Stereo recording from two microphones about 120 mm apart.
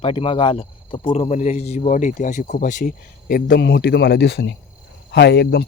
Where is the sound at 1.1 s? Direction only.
65° left (ahead or behind); by 2.8 s 90° left.